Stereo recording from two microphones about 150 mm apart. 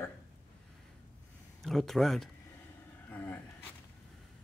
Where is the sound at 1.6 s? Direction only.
Centre (ahead or behind).